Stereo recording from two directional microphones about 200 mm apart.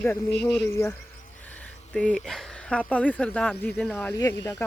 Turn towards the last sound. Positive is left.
turn(degrees=15)  # may be behind; listen again after turning